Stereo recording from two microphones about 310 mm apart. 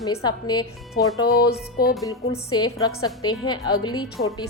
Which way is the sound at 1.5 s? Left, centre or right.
Left.